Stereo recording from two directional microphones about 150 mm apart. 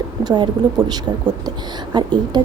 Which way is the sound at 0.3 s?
30° right (ahead or behind).